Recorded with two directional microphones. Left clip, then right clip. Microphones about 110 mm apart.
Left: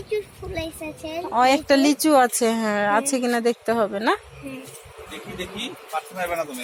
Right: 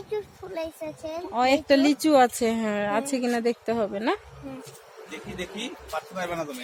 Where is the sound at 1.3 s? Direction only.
5° right (ahead or behind).